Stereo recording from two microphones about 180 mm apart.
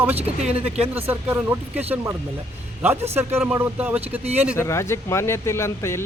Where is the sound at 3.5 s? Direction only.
10° right (ahead or behind).